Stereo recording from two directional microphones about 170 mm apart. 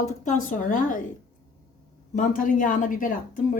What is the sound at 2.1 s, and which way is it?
A woman's voice, 50° left (ahead or behind).